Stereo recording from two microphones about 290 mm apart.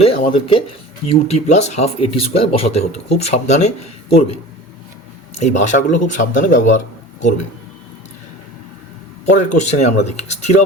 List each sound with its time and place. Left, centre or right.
0.0 s speech: centre
5.4 s speech: left
9.3 s speech: left